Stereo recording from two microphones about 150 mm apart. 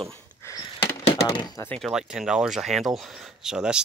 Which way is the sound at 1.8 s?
5° right (ahead or behind).